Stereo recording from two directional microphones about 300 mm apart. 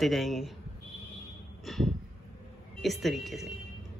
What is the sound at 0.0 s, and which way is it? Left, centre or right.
Speech, centre.